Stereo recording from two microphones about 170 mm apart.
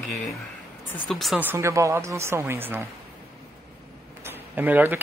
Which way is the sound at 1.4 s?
15° right (ahead or behind).